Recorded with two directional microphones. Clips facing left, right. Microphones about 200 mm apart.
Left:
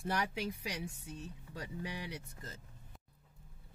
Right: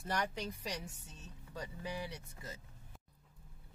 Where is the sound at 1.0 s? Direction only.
60° left (ahead or behind).